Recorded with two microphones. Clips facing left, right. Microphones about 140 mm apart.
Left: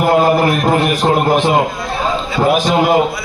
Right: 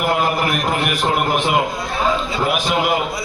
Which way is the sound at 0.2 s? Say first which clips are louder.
Left 7 dB; 35° left (ahead or behind).